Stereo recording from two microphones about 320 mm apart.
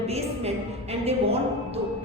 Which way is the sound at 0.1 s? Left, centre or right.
Centre.